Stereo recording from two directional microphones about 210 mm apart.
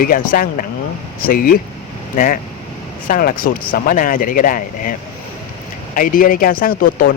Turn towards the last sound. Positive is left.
turn(degrees=45)  # may be behind; listen again after turning